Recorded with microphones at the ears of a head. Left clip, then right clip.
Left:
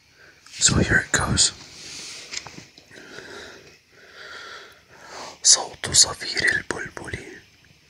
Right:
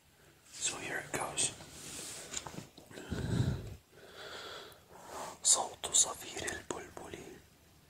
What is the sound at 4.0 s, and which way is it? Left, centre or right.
Sneeze, left.